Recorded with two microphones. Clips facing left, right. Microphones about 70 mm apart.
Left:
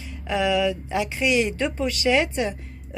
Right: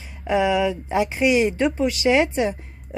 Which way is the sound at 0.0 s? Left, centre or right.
Right.